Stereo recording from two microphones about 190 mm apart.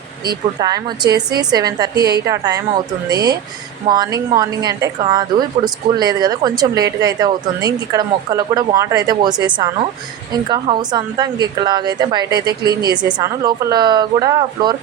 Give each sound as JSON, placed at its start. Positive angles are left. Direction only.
{"t": 0.6, "sound": "a woman's voice", "side_deg": -20}